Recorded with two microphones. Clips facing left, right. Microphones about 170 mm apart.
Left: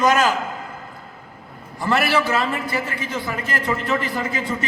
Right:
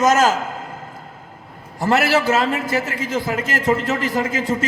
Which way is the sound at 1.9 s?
90° right.